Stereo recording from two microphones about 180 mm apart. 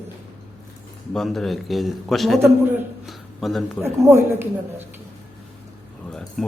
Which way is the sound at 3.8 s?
10° right (ahead or behind).